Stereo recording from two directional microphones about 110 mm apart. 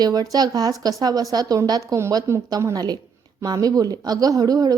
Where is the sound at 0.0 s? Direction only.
35° right (ahead or behind).